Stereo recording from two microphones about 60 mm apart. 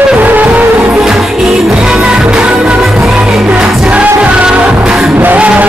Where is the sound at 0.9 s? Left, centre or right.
Centre.